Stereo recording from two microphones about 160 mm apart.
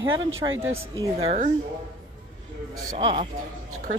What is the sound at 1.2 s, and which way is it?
Speech, 40° right (ahead or behind).